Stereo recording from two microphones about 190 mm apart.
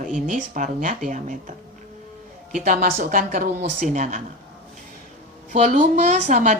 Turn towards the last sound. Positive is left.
turn(degrees=-40)  # may be behind; listen again after turning